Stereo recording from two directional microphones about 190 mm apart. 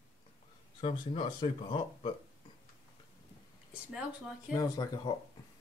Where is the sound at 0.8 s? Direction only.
25° left (ahead or behind).